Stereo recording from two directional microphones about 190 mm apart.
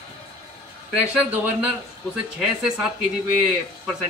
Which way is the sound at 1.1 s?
5° right (ahead or behind).